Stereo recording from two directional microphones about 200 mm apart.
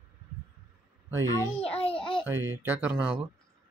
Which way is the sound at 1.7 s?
30° left (ahead or behind).